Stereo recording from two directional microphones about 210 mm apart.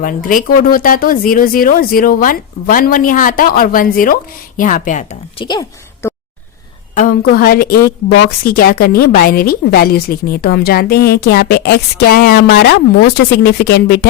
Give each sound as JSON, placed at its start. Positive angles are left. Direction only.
{"t": 0.0, "sound": "speech", "side_deg": 40}
{"t": 5.4, "sound": "a woman's voice", "side_deg": 20}
{"t": 6.9, "sound": "a woman's voice", "side_deg": 45}